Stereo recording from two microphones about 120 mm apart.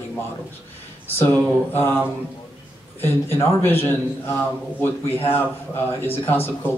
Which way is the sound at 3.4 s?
20° left (ahead or behind).